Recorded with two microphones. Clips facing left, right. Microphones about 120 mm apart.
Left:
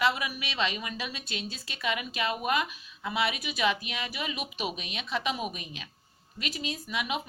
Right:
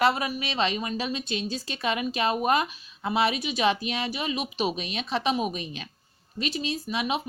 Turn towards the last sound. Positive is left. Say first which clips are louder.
# right 5 dB
turn(degrees=-25)  # may be behind; listen again after turning